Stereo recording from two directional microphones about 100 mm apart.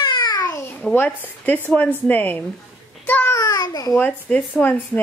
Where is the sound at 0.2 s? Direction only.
40° left (ahead or behind).